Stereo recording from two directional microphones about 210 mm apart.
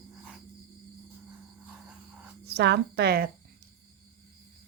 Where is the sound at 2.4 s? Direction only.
50° right (ahead or behind).